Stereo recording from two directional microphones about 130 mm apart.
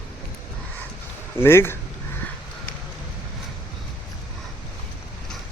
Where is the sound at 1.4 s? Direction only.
20° left (ahead or behind).